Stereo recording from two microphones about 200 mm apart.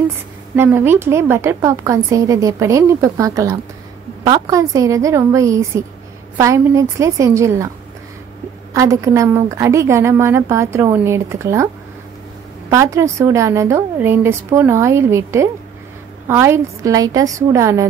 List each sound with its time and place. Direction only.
0.6 s a woman's voice: 10° right (ahead or behind)
8.7 s a woman's voice: 15° right (ahead or behind)